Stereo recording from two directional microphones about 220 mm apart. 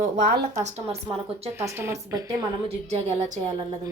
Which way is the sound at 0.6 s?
30° right (ahead or behind).